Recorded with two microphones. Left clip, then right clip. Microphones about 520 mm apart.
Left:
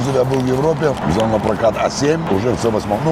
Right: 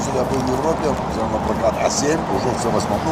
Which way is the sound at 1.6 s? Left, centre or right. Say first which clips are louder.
Even; left.